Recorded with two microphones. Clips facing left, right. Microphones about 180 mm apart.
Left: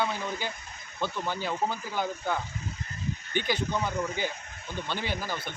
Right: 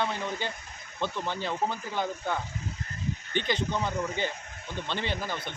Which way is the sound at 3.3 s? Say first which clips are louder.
Even; 5° left (ahead or behind).